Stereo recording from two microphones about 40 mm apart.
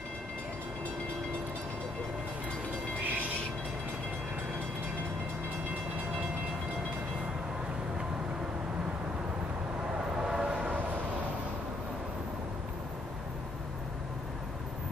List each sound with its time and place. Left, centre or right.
10.1 s train: centre